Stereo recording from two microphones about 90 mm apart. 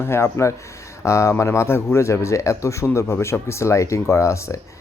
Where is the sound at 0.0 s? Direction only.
30° left (ahead or behind).